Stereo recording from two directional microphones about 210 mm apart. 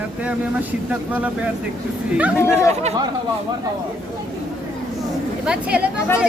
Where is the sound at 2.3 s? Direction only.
10° left (ahead or behind).